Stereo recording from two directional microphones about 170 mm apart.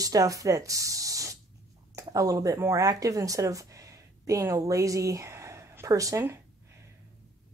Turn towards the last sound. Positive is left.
turn(degrees=-15)  # may be behind; listen again after turning